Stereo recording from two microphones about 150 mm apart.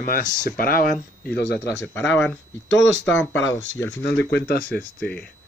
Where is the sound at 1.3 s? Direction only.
90° left.